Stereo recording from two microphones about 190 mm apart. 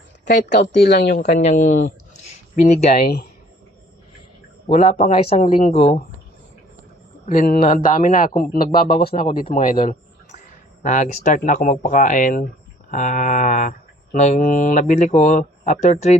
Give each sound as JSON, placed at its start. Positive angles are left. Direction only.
{"t": 0.3, "sound": "speech", "side_deg": 65}
{"t": 1.4, "sound": "speech", "side_deg": 40}
{"t": 2.6, "sound": "mantra", "side_deg": 40}
{"t": 4.6, "sound": "mantra", "side_deg": 30}
{"t": 7.3, "sound": "speech", "side_deg": 45}
{"t": 9.1, "sound": "mantra", "side_deg": 40}
{"t": 10.8, "sound": "speech", "side_deg": 45}
{"t": 12.9, "sound": "mantra", "side_deg": 40}